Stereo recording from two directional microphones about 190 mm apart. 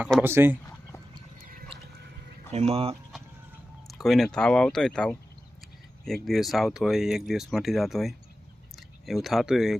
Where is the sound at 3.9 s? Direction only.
Centre (ahead or behind).